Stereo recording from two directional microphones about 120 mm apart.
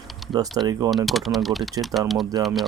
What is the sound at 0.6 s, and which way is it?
Speech, 30° right (ahead or behind).